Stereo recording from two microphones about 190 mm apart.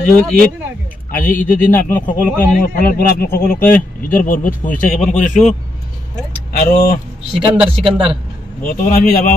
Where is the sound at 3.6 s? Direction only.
10° left (ahead or behind).